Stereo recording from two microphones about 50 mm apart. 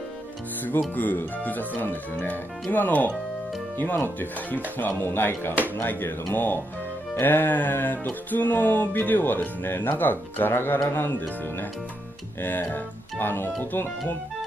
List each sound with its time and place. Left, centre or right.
0.7 s music: left
4.7 s speech: left
7.2 s music: left
11.1 s music: left